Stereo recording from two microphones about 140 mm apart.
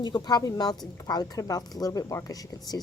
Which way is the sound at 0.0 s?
30° left (ahead or behind).